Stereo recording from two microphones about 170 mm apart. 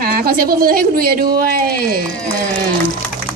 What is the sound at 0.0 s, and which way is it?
Speech, 60° right (ahead or behind).